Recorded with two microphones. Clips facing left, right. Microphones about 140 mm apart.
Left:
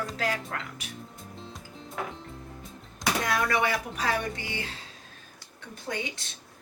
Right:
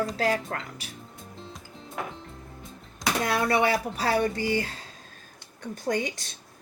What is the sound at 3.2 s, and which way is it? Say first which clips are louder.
A woman's voice: right 4 dB; 30° right (ahead or behind).